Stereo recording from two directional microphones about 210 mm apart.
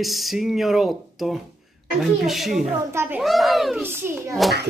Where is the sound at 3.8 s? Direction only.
10° right (ahead or behind).